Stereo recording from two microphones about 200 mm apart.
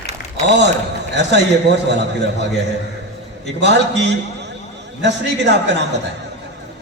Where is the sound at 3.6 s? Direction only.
60° right (ahead or behind).